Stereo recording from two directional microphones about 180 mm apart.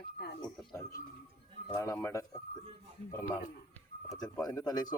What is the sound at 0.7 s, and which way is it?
Speech, 20° left (ahead or behind).